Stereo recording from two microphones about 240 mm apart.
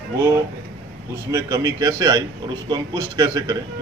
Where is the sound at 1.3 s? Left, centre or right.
Centre.